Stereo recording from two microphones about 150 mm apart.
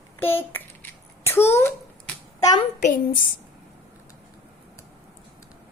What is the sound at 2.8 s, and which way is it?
Speech, 60° left (ahead or behind).